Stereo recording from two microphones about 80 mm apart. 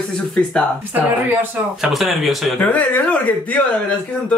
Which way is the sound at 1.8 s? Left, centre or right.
Centre.